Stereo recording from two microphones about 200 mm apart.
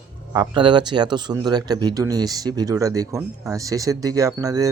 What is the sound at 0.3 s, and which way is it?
Speech, 25° right (ahead or behind).